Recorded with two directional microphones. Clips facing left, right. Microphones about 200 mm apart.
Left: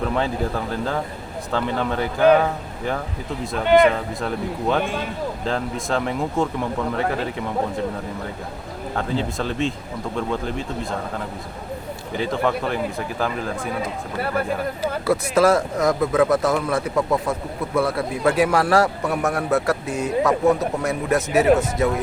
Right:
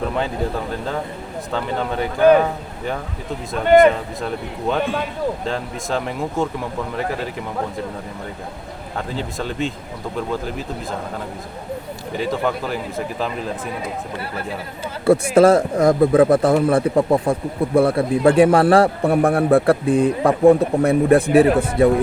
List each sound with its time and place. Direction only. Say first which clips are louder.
1.5 s speech: even; centre (ahead or behind)
5.5 s speech: even; centre (ahead or behind)
9.1 s speech: left 1 dB; centre (ahead or behind)
12.3 s speech: left 1 dB; centre (ahead or behind)
15.0 s a man's voice: right 6 dB; 30° right (ahead or behind)